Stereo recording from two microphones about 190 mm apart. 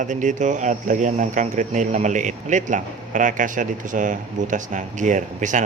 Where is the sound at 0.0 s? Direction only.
40° right (ahead or behind).